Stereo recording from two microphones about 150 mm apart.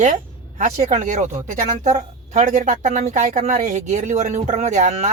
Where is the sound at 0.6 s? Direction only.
55° right (ahead or behind).